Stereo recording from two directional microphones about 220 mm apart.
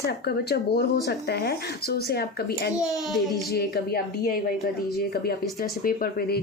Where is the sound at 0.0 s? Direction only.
45° left (ahead or behind).